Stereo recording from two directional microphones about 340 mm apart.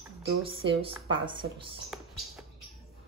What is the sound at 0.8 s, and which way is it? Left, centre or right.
Speech, centre.